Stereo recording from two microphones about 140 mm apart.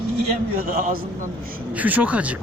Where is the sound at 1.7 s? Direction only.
10° right (ahead or behind).